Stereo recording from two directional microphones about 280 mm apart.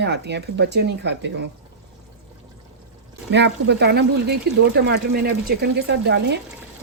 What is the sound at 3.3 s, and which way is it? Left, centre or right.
Speech, right.